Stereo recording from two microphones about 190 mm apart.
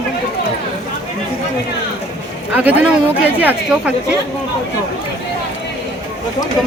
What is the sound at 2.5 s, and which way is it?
A woman's voice, 5° right (ahead or behind).